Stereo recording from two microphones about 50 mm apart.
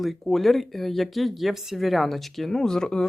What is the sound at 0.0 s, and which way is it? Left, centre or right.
Speech, centre.